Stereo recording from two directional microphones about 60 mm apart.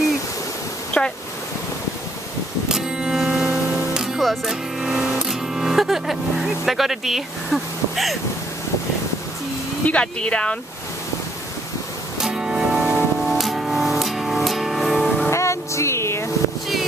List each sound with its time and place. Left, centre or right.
0.9 s a sound: left
2.7 s music: centre
4.2 s speech: centre
9.8 s speech: centre
12.2 s music: centre
15.3 s vehicle: left